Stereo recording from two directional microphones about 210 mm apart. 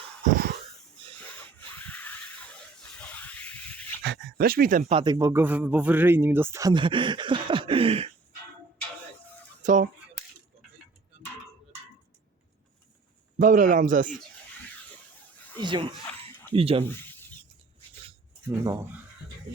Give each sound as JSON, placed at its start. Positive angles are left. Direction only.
{"t": 0.3, "sound": "wheeze", "side_deg": -45}
{"t": 1.9, "sound": "a sound", "side_deg": 10}
{"t": 4.0, "sound": "speech", "side_deg": -50}
{"t": 4.9, "sound": "speech", "side_deg": -25}
{"t": 9.6, "sound": "speech", "side_deg": -40}
{"t": 13.4, "sound": "speech", "side_deg": -40}
{"t": 15.6, "sound": "speech", "side_deg": -20}
{"t": 18.0, "sound": "a sound", "side_deg": -20}